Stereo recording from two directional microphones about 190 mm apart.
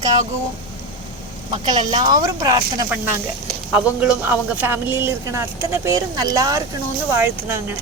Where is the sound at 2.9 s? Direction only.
10° right (ahead or behind).